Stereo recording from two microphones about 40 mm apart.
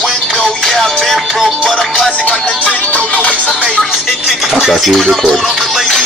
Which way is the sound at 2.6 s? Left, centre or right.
Left.